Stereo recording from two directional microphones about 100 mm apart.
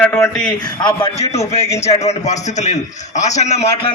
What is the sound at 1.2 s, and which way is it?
Speech, 90° left.